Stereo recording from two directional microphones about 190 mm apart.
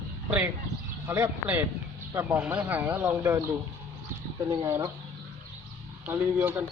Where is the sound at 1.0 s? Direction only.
10° right (ahead or behind).